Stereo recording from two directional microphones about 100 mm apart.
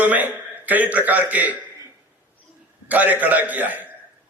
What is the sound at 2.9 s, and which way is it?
Speech, 15° right (ahead or behind).